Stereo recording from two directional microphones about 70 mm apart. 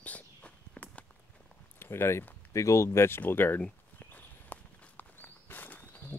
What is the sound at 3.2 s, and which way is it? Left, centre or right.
Speech, left.